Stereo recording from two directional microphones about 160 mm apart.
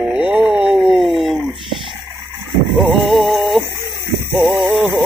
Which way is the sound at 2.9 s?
Centre (ahead or behind).